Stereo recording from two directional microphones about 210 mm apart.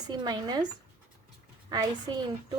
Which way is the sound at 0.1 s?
20° right (ahead or behind).